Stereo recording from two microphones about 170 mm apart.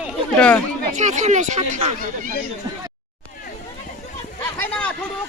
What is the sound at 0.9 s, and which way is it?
Speech, 45° right (ahead or behind).